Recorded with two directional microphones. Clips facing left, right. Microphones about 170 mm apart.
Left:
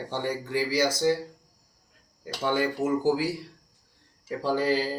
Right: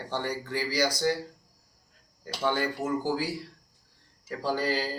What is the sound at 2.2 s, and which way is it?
Speech, 15° left (ahead or behind).